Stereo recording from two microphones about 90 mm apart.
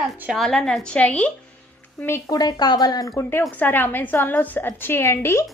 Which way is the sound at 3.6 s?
20° left (ahead or behind).